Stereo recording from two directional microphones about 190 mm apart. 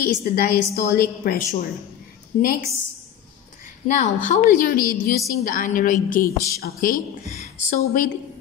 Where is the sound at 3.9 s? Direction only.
40° left (ahead or behind).